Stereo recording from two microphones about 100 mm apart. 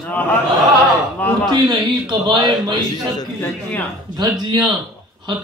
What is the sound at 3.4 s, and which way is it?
Speech, 20° left (ahead or behind).